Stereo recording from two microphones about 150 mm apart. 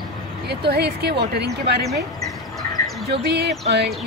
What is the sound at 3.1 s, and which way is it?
Speech, 90° right.